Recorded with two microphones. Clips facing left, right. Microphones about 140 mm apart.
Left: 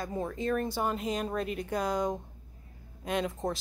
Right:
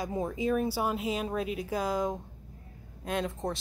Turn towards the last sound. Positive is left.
turn(degrees=0)  # may be behind; listen again after turning